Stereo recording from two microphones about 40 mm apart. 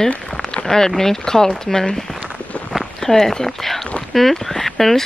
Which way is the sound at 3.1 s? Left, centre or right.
Centre.